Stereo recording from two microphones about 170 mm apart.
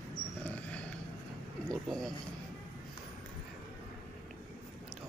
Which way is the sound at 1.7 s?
Centre (ahead or behind).